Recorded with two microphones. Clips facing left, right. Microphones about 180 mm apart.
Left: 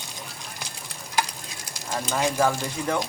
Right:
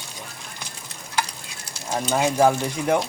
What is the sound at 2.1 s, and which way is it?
Speech, 15° right (ahead or behind).